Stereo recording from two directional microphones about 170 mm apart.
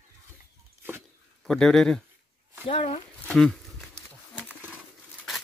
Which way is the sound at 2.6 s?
40° left (ahead or behind).